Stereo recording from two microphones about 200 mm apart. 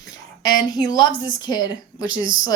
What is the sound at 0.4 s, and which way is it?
Speech, 20° left (ahead or behind).